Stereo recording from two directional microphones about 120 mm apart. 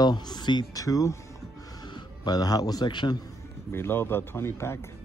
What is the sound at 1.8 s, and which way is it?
Speech, 35° left (ahead or behind).